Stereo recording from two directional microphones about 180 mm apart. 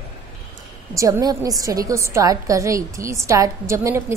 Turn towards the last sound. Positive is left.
turn(degrees=-15)  # may be behind; listen again after turning